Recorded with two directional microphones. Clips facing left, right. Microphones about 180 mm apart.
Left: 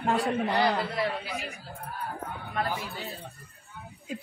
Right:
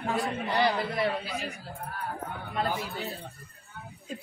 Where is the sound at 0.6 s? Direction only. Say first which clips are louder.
Even; 20° right (ahead or behind).